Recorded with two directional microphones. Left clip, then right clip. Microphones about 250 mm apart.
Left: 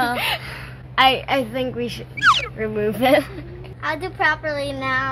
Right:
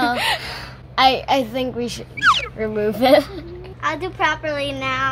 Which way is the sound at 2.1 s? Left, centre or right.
Centre.